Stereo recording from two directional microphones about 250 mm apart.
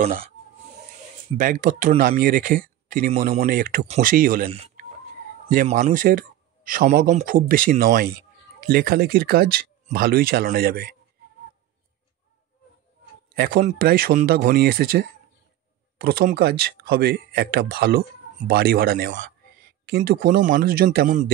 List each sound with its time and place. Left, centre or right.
1.4 s speech: right
4.5 s speech: right
5.5 s speech: right
13.4 s speech: right